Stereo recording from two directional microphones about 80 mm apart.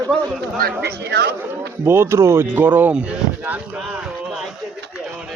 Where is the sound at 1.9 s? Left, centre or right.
Right.